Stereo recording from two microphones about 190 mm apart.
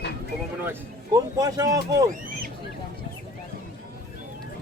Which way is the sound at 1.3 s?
20° right (ahead or behind).